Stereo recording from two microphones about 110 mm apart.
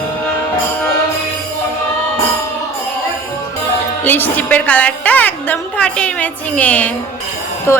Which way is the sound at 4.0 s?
15° left (ahead or behind).